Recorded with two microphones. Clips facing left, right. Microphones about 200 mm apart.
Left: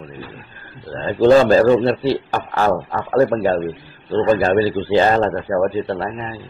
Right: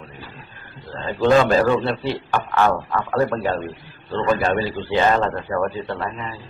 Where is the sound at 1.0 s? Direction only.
35° left (ahead or behind).